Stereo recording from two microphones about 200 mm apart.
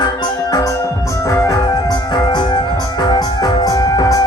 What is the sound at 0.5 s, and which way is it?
Music, 15° left (ahead or behind).